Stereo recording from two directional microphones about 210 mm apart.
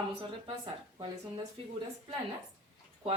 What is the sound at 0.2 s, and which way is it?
Speech, 25° right (ahead or behind).